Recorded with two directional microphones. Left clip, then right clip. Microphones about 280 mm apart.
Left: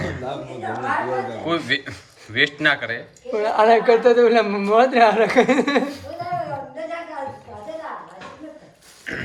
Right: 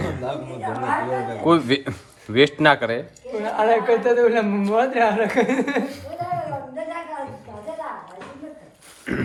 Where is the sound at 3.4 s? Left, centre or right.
Left.